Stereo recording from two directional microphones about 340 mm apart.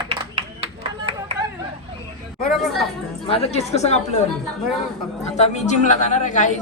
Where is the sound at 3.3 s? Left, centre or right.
Centre.